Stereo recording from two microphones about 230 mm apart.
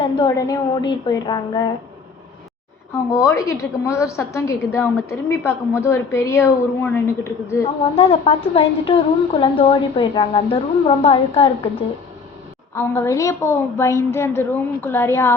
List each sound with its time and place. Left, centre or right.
0.0 s a woman's voice: centre
2.9 s a woman's voice: centre
7.9 s a woman's voice: left
12.7 s a woman's voice: centre